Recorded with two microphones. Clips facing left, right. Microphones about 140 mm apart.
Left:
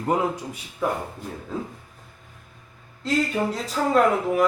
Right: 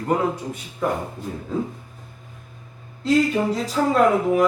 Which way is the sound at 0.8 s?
5° left (ahead or behind).